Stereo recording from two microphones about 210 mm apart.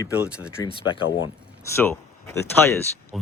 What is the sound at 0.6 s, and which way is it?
Speech, 25° left (ahead or behind).